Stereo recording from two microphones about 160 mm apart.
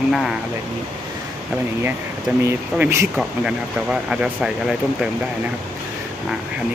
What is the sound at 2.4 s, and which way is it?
Speech, 15° right (ahead or behind).